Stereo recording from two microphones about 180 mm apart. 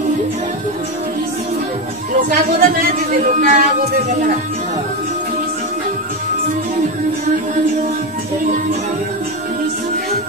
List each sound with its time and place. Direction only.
2.1 s speech: 50° right (ahead or behind)